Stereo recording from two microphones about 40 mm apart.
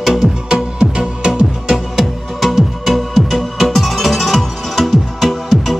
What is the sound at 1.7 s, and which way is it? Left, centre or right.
Music, centre.